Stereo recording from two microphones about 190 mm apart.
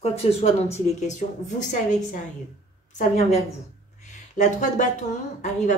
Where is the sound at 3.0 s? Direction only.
35° left (ahead or behind).